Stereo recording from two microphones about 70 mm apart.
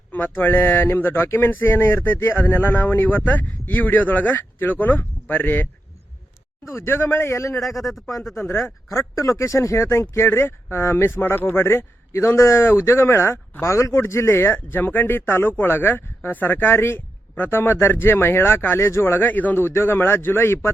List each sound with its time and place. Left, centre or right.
0.1 s speech: left
6.7 s speech: left
7.6 s speech: centre
8.4 s speech: left
8.9 s speech: left